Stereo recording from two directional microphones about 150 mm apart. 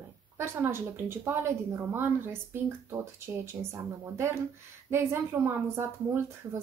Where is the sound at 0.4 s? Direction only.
15° right (ahead or behind).